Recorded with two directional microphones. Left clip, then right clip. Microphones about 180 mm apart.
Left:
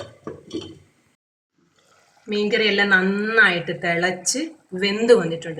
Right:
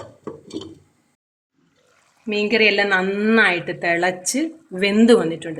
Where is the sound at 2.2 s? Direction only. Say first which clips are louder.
Right 3 dB; 55° right (ahead or behind).